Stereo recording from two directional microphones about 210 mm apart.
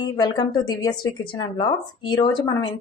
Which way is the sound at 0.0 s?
20° left (ahead or behind).